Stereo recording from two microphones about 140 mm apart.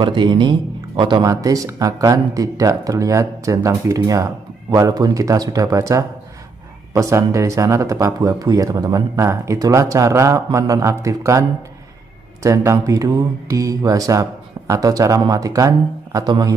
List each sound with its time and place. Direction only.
0.0 s speech: 35° right (ahead or behind)
12.4 s speech: 25° right (ahead or behind)